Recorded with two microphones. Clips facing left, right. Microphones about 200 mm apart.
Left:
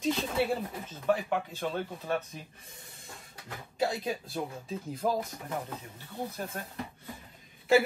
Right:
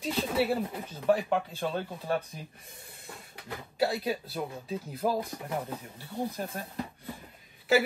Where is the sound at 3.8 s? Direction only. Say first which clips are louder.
Right 2 dB; 5° right (ahead or behind).